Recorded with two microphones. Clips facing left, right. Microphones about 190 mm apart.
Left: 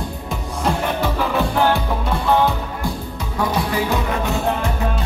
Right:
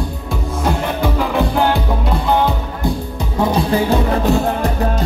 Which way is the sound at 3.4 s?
25° right (ahead or behind).